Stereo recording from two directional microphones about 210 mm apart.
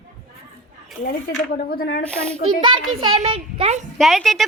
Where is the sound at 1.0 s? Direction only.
45° left (ahead or behind).